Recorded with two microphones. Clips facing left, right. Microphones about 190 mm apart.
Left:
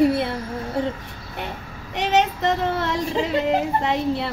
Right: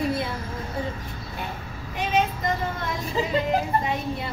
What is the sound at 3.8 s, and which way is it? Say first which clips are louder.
Speech: left 6 dB; 80° left.